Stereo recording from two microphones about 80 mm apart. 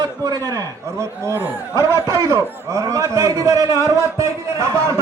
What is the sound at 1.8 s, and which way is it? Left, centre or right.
A man's voice, right.